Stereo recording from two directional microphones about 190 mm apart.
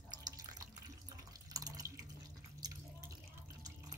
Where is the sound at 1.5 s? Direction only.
20° right (ahead or behind).